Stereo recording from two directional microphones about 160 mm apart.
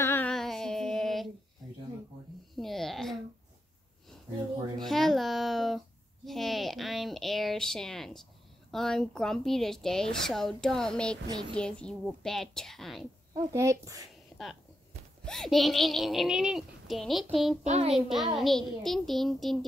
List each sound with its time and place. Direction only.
0.0 s music: 15° left (ahead or behind)
0.3 s female singing: 5° left (ahead or behind)
2.5 s babbling: centre (ahead or behind)
4.7 s a sound: centre (ahead or behind)
8.7 s speech: 5° left (ahead or behind)
13.3 s speech: 20° right (ahead or behind)
15.2 s speech: 5° left (ahead or behind)
17.6 s a child's voice: 40° right (ahead or behind)
17.9 s speech: centre (ahead or behind)